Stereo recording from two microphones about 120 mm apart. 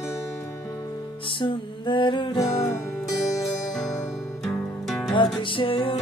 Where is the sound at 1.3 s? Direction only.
45° left (ahead or behind).